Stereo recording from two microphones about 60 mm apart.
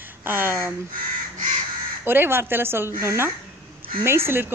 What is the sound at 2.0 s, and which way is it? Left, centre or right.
Speech, right.